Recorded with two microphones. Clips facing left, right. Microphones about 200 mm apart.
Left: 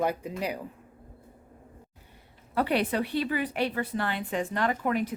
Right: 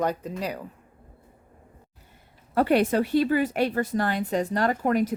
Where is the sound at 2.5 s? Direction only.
45° right (ahead or behind).